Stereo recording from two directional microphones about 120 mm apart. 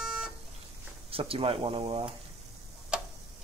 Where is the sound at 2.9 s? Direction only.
10° right (ahead or behind).